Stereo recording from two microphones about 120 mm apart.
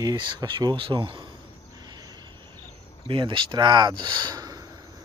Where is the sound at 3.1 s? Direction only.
40° right (ahead or behind).